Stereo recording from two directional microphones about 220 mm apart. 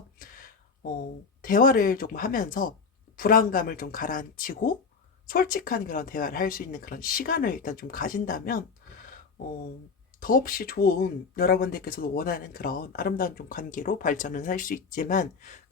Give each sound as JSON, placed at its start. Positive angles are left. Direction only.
{"t": 0.2, "sound": "a sound", "side_deg": 40}
{"t": 1.4, "sound": "speech", "side_deg": 40}
{"t": 10.2, "sound": "speech", "side_deg": 40}